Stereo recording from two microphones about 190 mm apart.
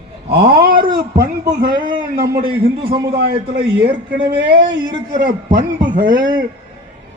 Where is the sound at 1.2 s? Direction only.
50° right (ahead or behind).